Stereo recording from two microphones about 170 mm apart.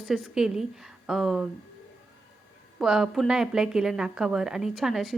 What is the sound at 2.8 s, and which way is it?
A woman's voice, 5° right (ahead or behind).